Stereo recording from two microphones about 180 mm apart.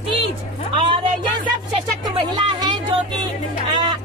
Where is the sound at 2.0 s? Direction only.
25° right (ahead or behind).